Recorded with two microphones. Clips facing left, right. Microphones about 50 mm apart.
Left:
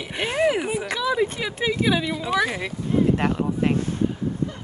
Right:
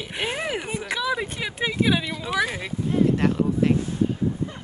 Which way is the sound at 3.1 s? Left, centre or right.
Left.